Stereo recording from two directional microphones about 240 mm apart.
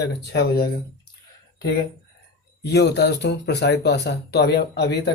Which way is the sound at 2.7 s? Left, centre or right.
Left.